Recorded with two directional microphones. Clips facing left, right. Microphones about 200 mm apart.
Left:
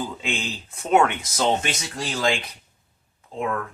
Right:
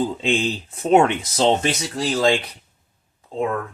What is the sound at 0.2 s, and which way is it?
Speech, 30° right (ahead or behind).